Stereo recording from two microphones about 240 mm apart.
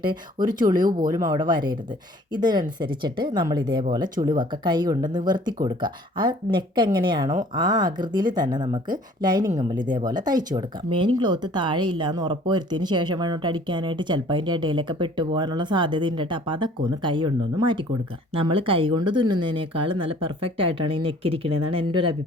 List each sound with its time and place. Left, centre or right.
0.0 s speech: centre